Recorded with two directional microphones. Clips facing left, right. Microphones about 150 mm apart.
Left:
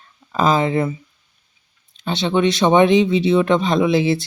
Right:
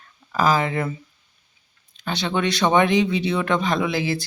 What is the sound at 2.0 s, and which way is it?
Speech, 25° left (ahead or behind).